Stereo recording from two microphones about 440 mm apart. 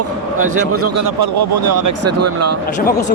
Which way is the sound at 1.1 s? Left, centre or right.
Right.